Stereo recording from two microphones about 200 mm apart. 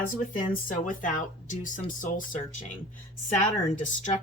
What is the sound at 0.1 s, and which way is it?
Speech, 45° left (ahead or behind).